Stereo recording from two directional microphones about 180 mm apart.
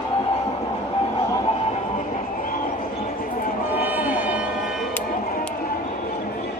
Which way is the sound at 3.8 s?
10° right (ahead or behind).